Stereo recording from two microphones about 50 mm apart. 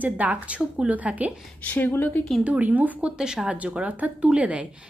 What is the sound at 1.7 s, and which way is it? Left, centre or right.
Speech, left.